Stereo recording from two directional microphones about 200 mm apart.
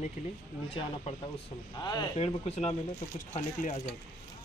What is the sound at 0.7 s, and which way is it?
Speech, 30° left (ahead or behind).